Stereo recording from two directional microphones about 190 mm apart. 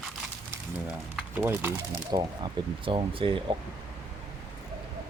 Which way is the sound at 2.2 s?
25° right (ahead or behind).